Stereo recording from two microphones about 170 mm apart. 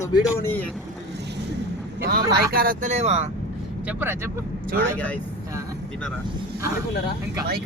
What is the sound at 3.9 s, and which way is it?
Speech, 10° right (ahead or behind).